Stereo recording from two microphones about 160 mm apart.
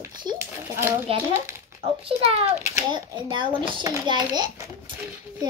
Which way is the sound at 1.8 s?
35° right (ahead or behind).